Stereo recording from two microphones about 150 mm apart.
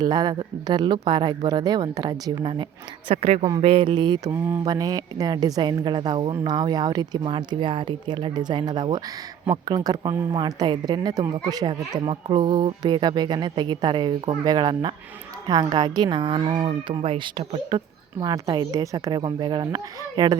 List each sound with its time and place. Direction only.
0.0 s speech: 25° right (ahead or behind)
3.1 s speech: 45° right (ahead or behind); by 20.4 s 30° right (ahead or behind)